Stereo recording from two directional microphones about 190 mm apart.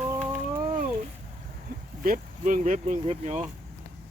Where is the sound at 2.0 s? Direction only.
45° right (ahead or behind).